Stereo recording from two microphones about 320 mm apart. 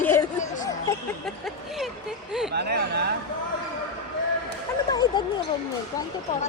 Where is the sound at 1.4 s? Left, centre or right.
Centre.